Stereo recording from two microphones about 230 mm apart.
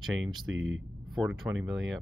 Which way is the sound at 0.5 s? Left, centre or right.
Right.